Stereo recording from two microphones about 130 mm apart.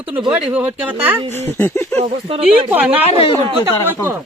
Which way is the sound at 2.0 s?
45° right (ahead or behind).